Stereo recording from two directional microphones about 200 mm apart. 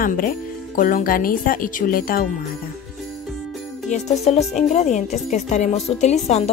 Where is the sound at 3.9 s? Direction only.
35° left (ahead or behind).